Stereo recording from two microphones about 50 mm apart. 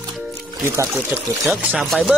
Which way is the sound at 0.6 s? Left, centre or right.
Right.